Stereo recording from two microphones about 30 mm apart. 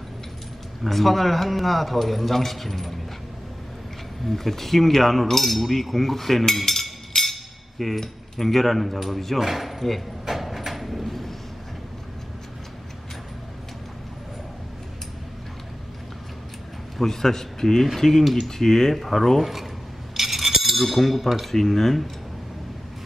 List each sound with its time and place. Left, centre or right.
0.8 s speech: centre
4.3 s speech: centre
10.2 s vehicle: centre
17.0 s a man's voice: centre
20.2 s cutlery: centre
21.5 s a man's voice: centre